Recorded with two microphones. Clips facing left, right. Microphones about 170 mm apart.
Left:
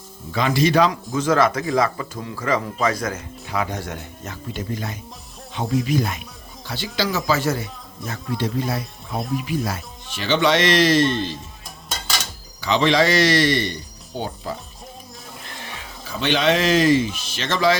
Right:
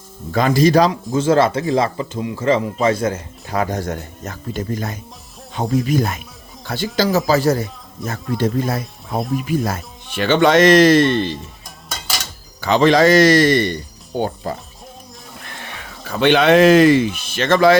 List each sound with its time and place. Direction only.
0.3 s speech: 45° right (ahead or behind); by 3.5 s 30° right (ahead or behind)
3.5 s speech: 45° right (ahead or behind); by 11.3 s 60° right (ahead or behind)
12.5 s speech: 50° right (ahead or behind)
16.0 s speech: 60° right (ahead or behind)